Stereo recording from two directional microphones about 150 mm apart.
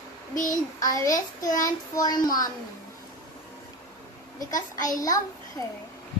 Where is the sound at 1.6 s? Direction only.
25° left (ahead or behind).